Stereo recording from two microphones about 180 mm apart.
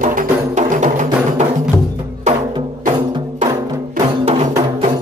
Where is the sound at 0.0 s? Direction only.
50° right (ahead or behind).